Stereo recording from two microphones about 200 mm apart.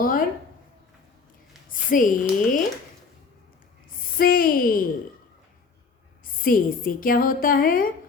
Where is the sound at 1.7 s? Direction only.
40° left (ahead or behind).